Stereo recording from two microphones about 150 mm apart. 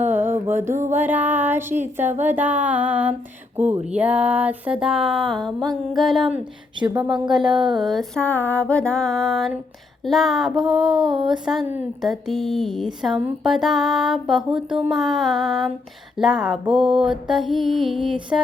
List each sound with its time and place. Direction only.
0.0 s music: 15° right (ahead or behind)
0.9 s a sound: 10° right (ahead or behind)
3.9 s music: 10° right (ahead or behind)
6.7 s speech: 30° right (ahead or behind)
7.8 s music: centre (ahead or behind)